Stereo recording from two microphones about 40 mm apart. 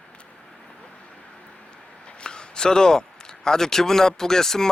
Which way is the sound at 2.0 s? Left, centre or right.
Left.